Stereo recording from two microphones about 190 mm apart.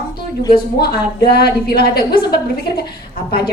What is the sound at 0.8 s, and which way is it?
A woman's voice, 55° left (ahead or behind).